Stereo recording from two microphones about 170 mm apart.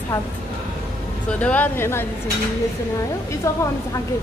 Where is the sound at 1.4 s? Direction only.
10° left (ahead or behind).